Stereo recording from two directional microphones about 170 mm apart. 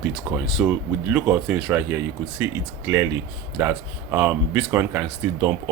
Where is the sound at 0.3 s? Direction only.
5° right (ahead or behind).